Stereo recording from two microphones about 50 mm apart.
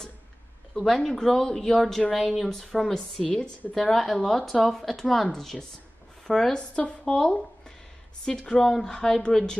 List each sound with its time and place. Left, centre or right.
0.7 s speech: centre
3.3 s a woman's voice: left
3.7 s speech: centre